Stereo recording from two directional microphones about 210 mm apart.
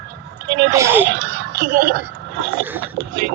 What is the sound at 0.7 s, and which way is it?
Speech, 10° right (ahead or behind).